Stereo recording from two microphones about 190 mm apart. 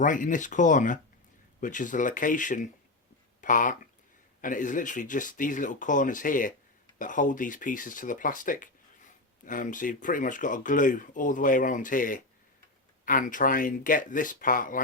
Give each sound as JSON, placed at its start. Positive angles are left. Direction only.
{"t": 0.0, "sound": "speech", "side_deg": 45}